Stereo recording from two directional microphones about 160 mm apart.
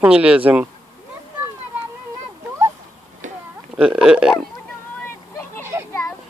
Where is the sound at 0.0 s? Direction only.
5° right (ahead or behind).